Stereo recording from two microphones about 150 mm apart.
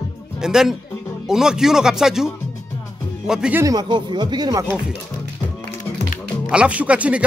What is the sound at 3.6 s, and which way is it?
Speech, 30° right (ahead or behind).